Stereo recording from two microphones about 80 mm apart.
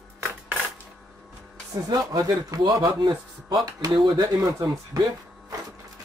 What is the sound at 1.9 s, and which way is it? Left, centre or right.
A man's voice, right.